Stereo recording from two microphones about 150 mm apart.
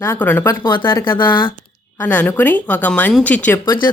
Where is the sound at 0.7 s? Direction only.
30° left (ahead or behind).